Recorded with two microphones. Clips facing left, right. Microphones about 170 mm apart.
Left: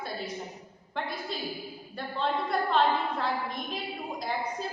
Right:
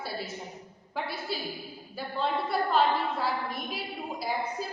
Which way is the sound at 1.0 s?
5° right (ahead or behind).